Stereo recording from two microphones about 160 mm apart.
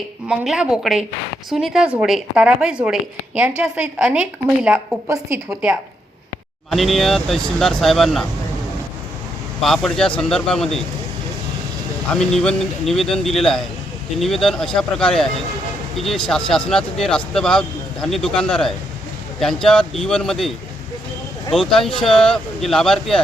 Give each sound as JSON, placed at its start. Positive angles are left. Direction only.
{"t": 0.3, "sound": "speech", "side_deg": -5}
{"t": 5.0, "sound": "a woman's voice", "side_deg": -15}
{"t": 6.7, "sound": "speech", "side_deg": 0}
{"t": 9.6, "sound": "speech", "side_deg": 0}
{"t": 12.1, "sound": "speech", "side_deg": 5}
{"t": 21.5, "sound": "speech", "side_deg": 5}